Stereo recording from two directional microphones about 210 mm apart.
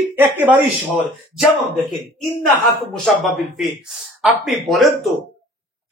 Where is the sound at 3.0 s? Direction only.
Centre (ahead or behind).